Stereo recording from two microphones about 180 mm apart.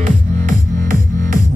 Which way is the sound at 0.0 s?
50° right (ahead or behind).